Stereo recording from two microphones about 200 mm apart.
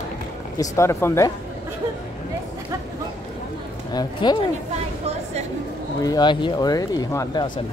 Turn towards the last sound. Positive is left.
turn(degrees=20)  # may be behind; listen again after turning